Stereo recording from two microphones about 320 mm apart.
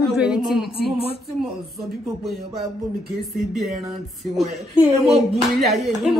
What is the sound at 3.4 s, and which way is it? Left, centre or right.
A woman's voice, centre.